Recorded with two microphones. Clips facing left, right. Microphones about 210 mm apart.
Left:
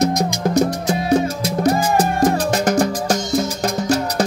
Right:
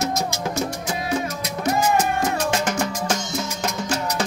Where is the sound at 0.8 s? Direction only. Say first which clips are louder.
Left 8 dB; 40° left (ahead or behind).